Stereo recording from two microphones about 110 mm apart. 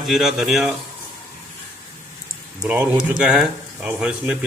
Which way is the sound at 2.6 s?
10° right (ahead or behind).